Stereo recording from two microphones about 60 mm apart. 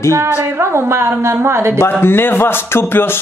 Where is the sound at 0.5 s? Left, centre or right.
Right.